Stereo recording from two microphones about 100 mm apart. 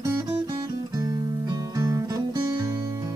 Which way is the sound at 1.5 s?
35° right (ahead or behind).